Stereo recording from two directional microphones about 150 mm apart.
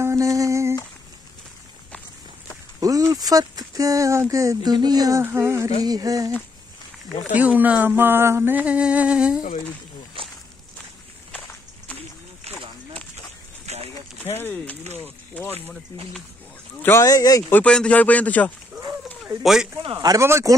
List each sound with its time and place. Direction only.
0.0 s humming: 20° right (ahead or behind)
3.1 s speech: 25° right (ahead or behind)
7.3 s a sound: 10° right (ahead or behind)
12.5 s a sound: 40° right (ahead or behind)
13.7 s a sound: 45° right (ahead or behind)
14.2 s speech: 15° left (ahead or behind)
16.8 s speech: 20° left (ahead or behind)
17.5 s speech: 10° left (ahead or behind)
19.4 s speech: 5° right (ahead or behind)
19.8 s speech: 30° right (ahead or behind)